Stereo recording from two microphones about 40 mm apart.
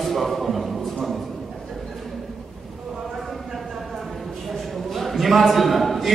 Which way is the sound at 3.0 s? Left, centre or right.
Centre.